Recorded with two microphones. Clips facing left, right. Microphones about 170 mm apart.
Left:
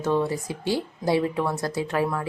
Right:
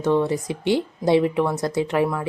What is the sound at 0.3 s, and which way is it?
A woman's voice, 20° right (ahead or behind).